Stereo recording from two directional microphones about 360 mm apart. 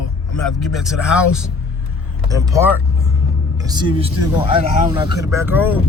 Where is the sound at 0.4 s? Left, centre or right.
Centre.